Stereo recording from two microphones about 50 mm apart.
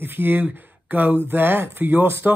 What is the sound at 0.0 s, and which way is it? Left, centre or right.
Speech, right.